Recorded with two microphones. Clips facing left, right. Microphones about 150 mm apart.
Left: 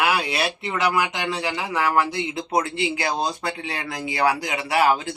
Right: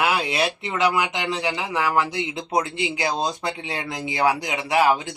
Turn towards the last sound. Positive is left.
turn(degrees=-15)  # may be behind; listen again after turning